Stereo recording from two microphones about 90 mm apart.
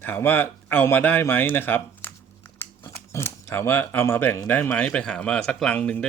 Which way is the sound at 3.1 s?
30° left (ahead or behind).